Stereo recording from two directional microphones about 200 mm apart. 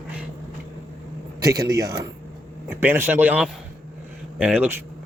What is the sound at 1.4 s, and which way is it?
Speech, 20° right (ahead or behind).